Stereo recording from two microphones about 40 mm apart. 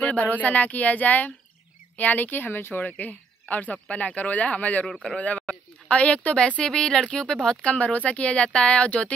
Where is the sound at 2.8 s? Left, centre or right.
Left; by 7.6 s centre.